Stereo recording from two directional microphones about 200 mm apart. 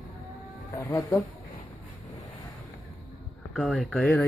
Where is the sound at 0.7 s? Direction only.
15° left (ahead or behind).